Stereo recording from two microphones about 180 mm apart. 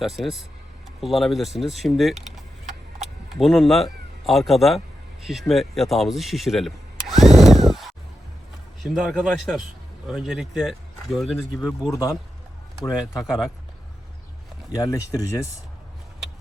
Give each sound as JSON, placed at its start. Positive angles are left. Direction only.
{"t": 0.0, "sound": "speech", "side_deg": 0}
{"t": 5.2, "sound": "a sound", "side_deg": 0}
{"t": 8.8, "sound": "speech", "side_deg": 0}
{"t": 12.8, "sound": "speech", "side_deg": 20}
{"t": 14.8, "sound": "speech", "side_deg": 20}